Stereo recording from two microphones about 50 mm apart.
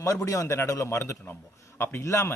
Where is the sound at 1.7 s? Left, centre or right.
Left.